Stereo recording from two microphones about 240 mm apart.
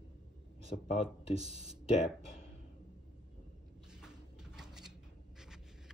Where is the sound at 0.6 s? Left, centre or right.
Left.